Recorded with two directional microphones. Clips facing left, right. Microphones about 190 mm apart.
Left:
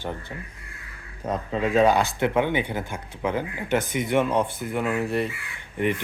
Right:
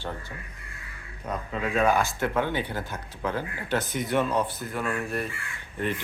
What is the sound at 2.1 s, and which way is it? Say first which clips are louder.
Speech: left 4 dB; 20° left (ahead or behind).